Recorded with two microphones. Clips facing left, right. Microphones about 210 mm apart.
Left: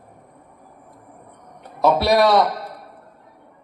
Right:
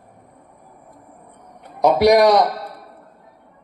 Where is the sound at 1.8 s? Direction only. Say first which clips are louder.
Right 3 dB; 15° right (ahead or behind).